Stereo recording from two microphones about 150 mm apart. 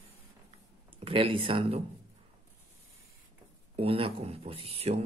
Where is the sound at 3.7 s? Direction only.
40° right (ahead or behind).